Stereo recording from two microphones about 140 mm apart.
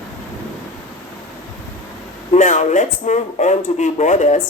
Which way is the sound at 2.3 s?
60° left (ahead or behind).